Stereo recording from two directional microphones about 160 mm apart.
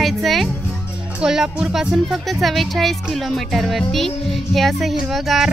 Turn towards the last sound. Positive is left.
turn(degrees=0)  # may be behind; listen again after turning